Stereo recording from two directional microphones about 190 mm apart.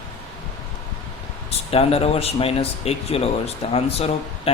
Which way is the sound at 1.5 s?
30° left (ahead or behind).